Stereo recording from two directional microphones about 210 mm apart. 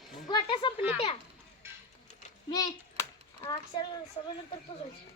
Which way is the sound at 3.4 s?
20° left (ahead or behind).